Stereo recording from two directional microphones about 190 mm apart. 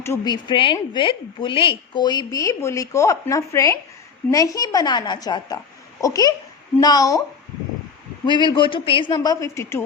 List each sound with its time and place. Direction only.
0.0 s a woman's voice: 20° left (ahead or behind)
8.3 s a woman's voice: 25° left (ahead or behind)